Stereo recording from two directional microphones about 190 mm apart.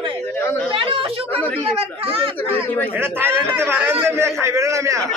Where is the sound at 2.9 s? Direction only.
10° right (ahead or behind).